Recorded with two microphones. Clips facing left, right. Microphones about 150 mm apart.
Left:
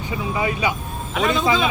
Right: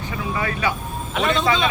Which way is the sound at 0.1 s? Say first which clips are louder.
Left 3 dB; 15° left (ahead or behind).